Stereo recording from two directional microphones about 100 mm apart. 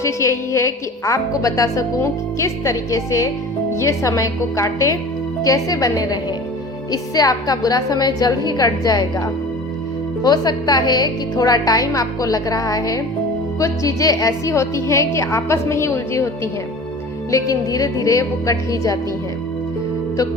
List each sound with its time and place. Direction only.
0.0 s a woman's voice: 30° left (ahead or behind)